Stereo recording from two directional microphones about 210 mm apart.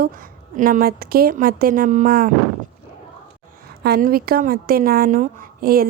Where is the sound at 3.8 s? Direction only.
45° right (ahead or behind).